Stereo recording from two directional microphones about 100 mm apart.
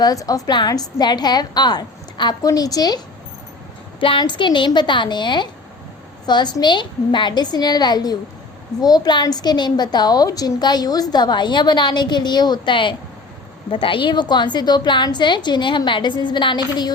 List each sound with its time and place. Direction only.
0.0 s a woman's voice: 35° left (ahead or behind)
4.0 s a woman's voice: 55° left (ahead or behind)